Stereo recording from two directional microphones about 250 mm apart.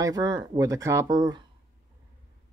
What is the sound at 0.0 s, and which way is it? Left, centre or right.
Speech, centre.